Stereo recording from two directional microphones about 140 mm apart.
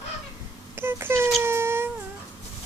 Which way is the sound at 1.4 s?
20° right (ahead or behind).